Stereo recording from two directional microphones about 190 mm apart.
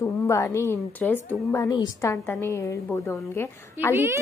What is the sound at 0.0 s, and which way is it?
A woman's voice, 15° left (ahead or behind).